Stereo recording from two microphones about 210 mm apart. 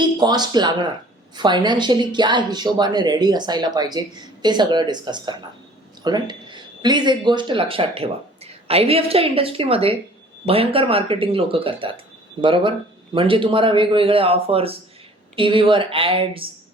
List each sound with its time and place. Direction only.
0.0 s speech: 20° right (ahead or behind)